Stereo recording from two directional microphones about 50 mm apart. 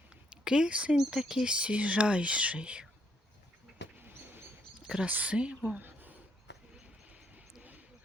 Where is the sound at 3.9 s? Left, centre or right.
Right.